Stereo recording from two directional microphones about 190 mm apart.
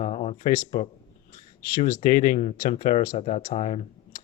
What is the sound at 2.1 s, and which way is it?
Speech, 45° left (ahead or behind).